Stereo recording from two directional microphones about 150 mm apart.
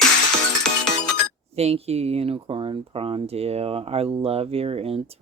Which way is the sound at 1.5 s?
45° right (ahead or behind).